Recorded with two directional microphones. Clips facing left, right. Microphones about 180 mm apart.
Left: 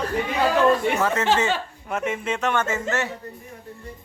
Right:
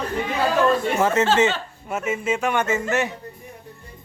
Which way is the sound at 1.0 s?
20° right (ahead or behind).